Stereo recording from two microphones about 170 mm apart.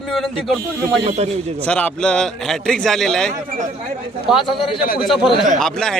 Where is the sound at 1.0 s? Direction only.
40° right (ahead or behind).